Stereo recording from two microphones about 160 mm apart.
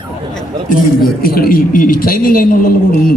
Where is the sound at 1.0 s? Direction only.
70° left (ahead or behind).